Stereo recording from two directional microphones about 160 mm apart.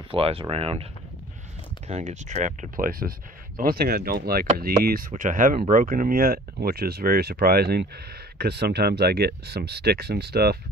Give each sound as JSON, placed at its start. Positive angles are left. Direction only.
{"t": 0.1, "sound": "speech", "side_deg": -35}
{"t": 1.9, "sound": "speech", "side_deg": -50}